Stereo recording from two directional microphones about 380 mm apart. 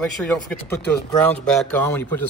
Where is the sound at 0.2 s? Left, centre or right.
Centre.